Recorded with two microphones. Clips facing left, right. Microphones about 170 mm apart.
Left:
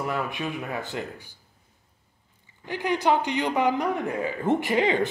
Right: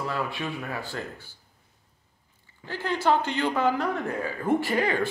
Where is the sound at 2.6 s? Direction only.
15° left (ahead or behind).